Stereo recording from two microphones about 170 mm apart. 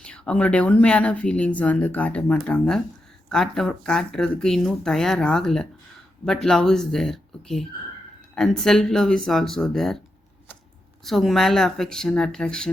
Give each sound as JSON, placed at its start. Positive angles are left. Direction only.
{"t": 0.0, "sound": "speech", "side_deg": 5}
{"t": 11.0, "sound": "speech", "side_deg": 0}